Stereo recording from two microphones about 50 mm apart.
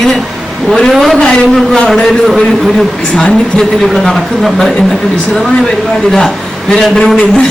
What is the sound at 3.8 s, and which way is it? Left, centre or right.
Speech, centre.